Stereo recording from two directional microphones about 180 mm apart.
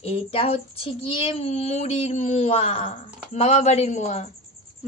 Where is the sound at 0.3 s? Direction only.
30° left (ahead or behind).